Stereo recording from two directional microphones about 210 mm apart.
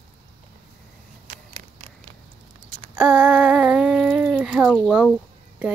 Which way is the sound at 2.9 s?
10° right (ahead or behind).